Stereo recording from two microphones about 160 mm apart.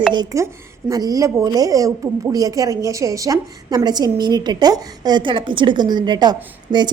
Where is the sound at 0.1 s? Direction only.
25° right (ahead or behind).